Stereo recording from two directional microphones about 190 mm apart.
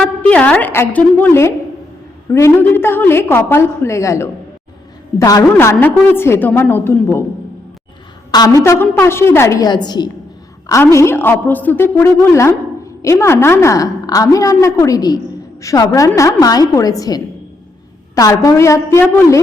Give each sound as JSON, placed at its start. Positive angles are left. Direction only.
{"t": 0.0, "sound": "a woman's voice", "side_deg": 5}
{"t": 8.3, "sound": "a woman's voice", "side_deg": 20}